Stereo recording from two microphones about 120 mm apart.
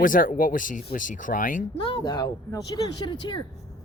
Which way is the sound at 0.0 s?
90° left.